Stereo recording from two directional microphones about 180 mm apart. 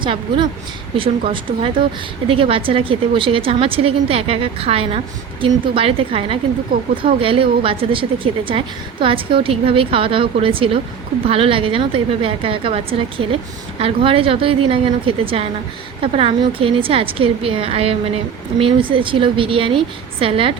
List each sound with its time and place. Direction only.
0.0 s speech: 25° right (ahead or behind)